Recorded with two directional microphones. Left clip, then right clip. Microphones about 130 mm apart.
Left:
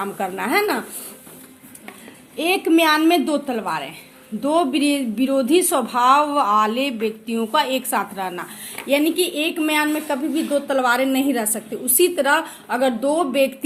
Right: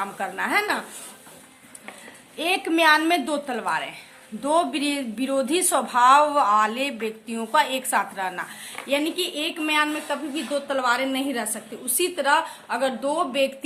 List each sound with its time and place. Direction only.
0.0 s speech: 35° left (ahead or behind)
2.3 s a woman's voice: 20° left (ahead or behind)
8.9 s a woman's voice: 40° left (ahead or behind)